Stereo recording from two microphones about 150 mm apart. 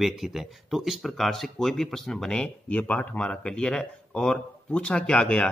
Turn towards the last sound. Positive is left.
turn(degrees=5)  # may be behind; listen again after turning